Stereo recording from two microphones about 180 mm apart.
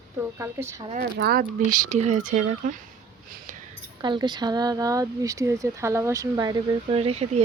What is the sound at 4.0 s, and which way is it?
Speech, 25° right (ahead or behind).